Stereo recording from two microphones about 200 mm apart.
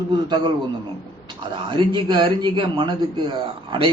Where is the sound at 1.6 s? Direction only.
25° right (ahead or behind).